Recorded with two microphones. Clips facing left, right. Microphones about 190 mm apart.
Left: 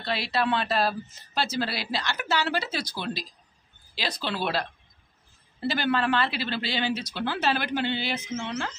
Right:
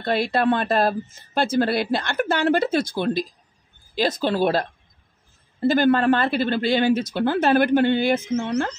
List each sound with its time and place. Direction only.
0.0 s speech: 50° right (ahead or behind)